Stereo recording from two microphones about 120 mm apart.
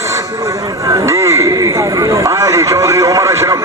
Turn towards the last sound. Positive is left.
turn(degrees=-25)  # may be behind; listen again after turning